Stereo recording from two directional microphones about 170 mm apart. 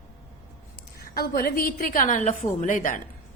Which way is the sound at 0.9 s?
60° left (ahead or behind).